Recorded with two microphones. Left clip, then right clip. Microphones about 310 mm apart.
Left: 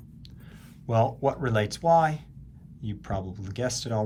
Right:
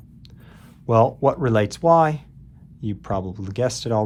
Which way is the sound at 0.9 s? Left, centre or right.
Centre.